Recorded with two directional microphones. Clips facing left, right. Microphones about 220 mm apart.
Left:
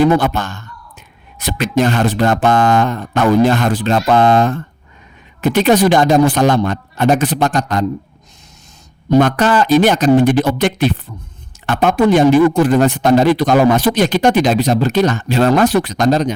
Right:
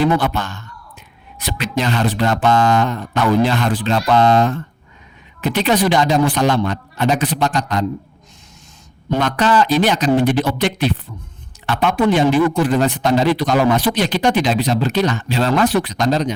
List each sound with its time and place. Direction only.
0.0 s speech: 45° left (ahead or behind)
9.0 s speech: 50° left (ahead or behind)